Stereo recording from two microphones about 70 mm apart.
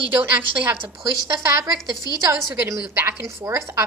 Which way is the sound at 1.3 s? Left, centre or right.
Right.